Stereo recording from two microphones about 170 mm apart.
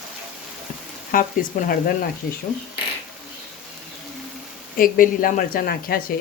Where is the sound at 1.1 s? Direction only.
55° left (ahead or behind).